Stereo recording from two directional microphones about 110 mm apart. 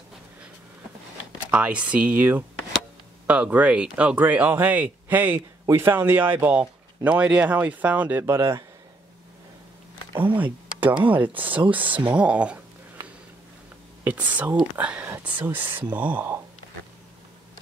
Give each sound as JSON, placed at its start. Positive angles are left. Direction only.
{"t": 1.5, "sound": "speech", "side_deg": -10}
{"t": 10.2, "sound": "speech", "side_deg": -15}
{"t": 14.0, "sound": "speech", "side_deg": -15}